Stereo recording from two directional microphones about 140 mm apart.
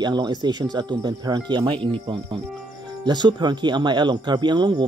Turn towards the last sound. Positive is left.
turn(degrees=-30)  # may be behind; listen again after turning